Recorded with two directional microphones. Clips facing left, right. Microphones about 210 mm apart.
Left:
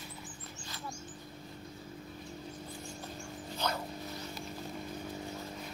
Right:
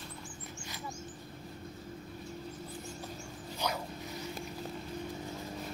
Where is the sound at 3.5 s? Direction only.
15° right (ahead or behind).